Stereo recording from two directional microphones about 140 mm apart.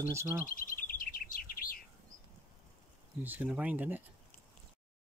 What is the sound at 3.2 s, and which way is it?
Speech, 10° right (ahead or behind).